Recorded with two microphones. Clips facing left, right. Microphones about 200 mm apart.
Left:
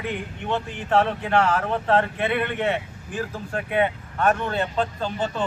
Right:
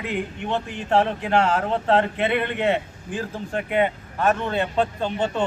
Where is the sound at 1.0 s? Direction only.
25° right (ahead or behind).